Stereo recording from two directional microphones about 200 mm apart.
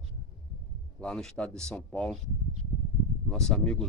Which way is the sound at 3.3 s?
5° left (ahead or behind).